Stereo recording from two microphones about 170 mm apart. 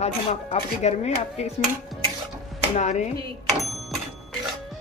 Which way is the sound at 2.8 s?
45° left (ahead or behind).